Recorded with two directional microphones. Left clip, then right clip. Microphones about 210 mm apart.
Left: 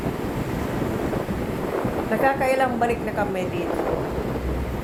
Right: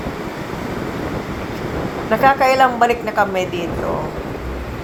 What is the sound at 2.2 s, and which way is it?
A woman's voice, 15° right (ahead or behind).